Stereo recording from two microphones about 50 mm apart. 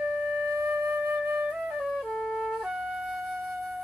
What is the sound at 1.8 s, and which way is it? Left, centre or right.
Music, centre.